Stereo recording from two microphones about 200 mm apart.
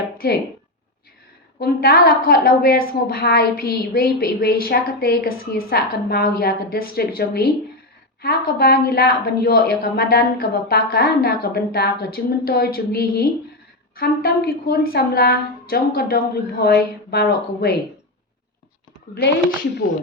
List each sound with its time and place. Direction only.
0.2 s a woman's voice: 50° left (ahead or behind)
1.5 s a woman's voice: 50° left (ahead or behind)